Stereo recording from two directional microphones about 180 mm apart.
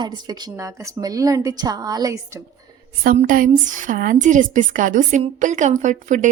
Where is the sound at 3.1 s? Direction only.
45° right (ahead or behind).